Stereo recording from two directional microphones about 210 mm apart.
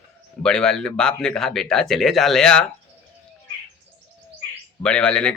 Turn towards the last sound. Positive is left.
turn(degrees=5)  # may be behind; listen again after turning